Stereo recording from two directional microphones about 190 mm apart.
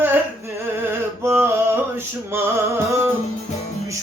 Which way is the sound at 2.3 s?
15° right (ahead or behind).